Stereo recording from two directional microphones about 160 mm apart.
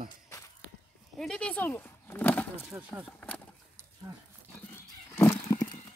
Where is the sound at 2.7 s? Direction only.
10° right (ahead or behind).